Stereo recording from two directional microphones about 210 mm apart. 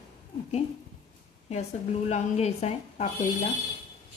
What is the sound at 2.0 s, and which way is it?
A woman's voice, 30° left (ahead or behind).